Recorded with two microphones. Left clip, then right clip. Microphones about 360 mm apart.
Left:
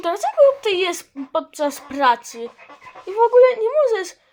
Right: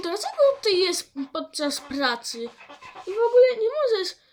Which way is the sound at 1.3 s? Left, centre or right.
Left.